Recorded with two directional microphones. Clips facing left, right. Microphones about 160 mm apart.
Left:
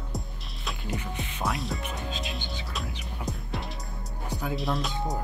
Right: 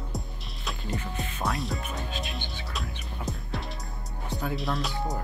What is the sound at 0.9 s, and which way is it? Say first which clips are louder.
Speech: right 1 dB; 15° left (ahead or behind).